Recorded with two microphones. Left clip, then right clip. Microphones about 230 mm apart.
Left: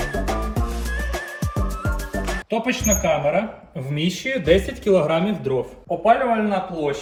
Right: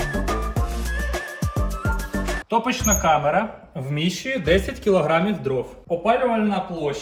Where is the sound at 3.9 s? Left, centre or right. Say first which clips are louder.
Left 1 dB; centre.